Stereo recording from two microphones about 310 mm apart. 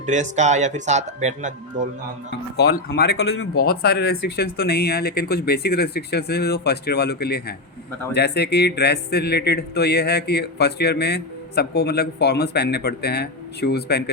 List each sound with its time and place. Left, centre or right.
0.0 s speech: right
2.6 s speech: left